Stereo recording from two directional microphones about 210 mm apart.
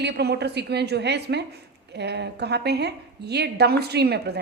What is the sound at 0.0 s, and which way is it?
A woman's voice, 50° right (ahead or behind).